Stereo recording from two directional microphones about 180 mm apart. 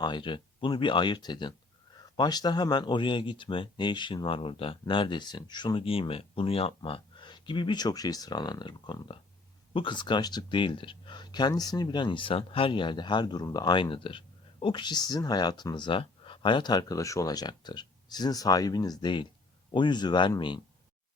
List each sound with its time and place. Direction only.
0.0 s speech: 25° left (ahead or behind)